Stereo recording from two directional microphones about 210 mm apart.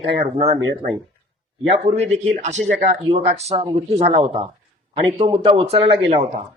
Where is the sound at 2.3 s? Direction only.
35° right (ahead or behind).